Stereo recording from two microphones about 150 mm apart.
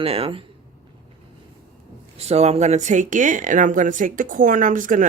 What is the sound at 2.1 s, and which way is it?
Speech, 45° right (ahead or behind).